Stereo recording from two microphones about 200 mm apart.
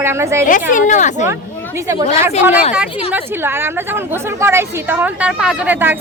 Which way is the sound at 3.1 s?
10° right (ahead or behind).